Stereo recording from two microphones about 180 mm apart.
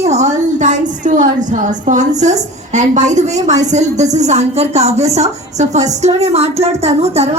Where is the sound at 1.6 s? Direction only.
40° right (ahead or behind).